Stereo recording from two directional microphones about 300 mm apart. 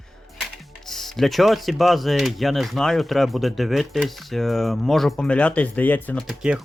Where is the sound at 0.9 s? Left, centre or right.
Centre.